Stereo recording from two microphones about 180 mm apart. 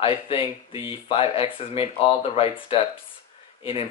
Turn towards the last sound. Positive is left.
turn(degrees=30)  # may be behind; listen again after turning